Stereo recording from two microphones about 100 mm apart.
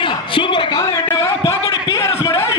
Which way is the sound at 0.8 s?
25° left (ahead or behind).